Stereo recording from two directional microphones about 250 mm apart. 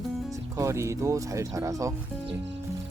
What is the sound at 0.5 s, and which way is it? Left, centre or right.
Speech, centre.